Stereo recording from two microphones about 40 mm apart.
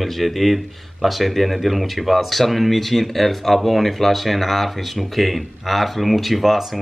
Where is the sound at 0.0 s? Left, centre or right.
Centre.